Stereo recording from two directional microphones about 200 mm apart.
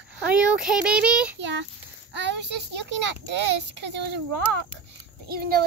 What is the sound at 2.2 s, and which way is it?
A child's voice, 60° right (ahead or behind).